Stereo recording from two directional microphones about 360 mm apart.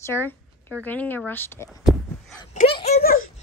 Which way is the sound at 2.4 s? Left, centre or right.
Centre.